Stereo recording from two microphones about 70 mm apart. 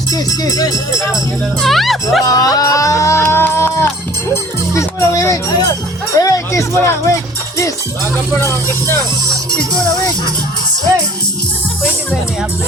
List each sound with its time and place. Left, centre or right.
0.1 s speech: left
1.6 s speech: centre
2.2 s a sound: left
3.2 s a sound: left
4.7 s speech: left
6.1 s music: left
6.7 s speech: left
8.3 s speech: left